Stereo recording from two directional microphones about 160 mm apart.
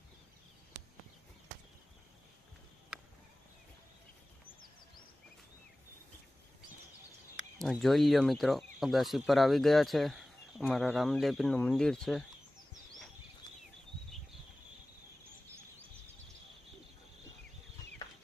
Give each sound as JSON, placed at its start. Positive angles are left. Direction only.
{"t": 7.6, "sound": "speech", "side_deg": 0}